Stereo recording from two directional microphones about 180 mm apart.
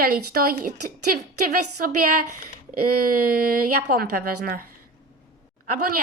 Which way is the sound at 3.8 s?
55° right (ahead or behind).